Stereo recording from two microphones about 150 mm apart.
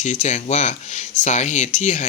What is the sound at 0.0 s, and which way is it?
Speech, 55° left (ahead or behind).